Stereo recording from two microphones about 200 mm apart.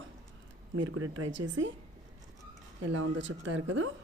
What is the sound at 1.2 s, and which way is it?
Speech, 70° right (ahead or behind).